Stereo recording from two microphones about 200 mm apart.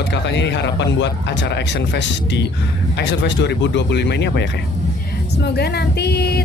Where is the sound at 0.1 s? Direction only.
60° left (ahead or behind).